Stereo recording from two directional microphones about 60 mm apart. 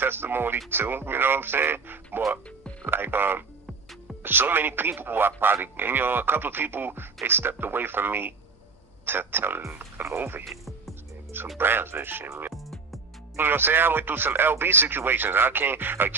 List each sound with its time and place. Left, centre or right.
0.0 s speech: right
10.4 s music: centre
11.5 s speech: right
13.3 s speech: right